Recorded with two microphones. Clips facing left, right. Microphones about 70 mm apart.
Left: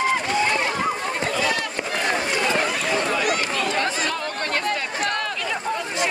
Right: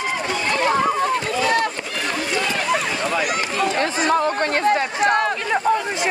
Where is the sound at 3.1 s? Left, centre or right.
Right.